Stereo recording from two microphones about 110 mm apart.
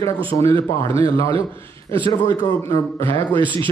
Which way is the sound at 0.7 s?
25° left (ahead or behind).